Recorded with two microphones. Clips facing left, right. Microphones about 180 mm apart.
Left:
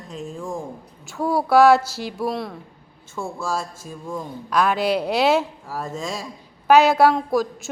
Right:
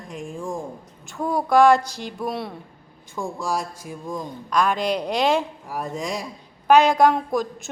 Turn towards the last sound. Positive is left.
turn(degrees=0)  # may be behind; listen again after turning